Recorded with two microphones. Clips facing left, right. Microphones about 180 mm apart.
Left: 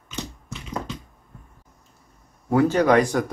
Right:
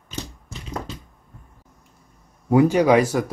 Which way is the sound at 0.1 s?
40° right (ahead or behind).